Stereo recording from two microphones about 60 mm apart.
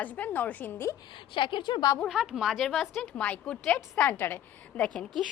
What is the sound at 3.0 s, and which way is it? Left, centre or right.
Speech, left.